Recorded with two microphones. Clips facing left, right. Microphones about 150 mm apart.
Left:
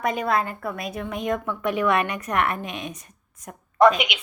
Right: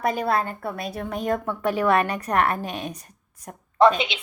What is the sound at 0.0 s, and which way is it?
A woman's voice, 35° right (ahead or behind).